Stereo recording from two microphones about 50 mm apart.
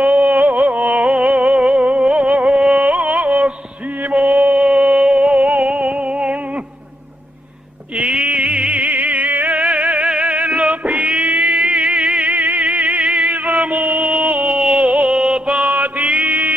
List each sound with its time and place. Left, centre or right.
0.0 s a sound: right
4.1 s music: right
8.0 s music: centre
10.0 s music: centre
15.7 s music: right
16.1 s mantra: right